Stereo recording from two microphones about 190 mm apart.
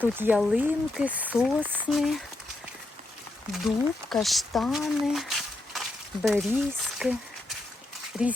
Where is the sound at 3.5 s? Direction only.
Centre (ahead or behind).